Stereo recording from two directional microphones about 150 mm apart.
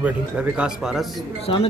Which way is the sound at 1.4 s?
40° left (ahead or behind).